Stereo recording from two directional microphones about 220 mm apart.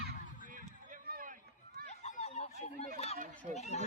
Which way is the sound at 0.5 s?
40° right (ahead or behind).